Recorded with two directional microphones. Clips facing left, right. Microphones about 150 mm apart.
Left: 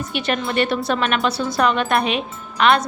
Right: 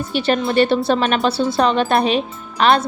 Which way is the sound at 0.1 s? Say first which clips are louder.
Right 6 dB; 30° right (ahead or behind).